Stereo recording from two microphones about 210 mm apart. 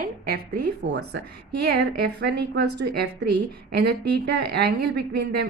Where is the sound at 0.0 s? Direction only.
45° right (ahead or behind).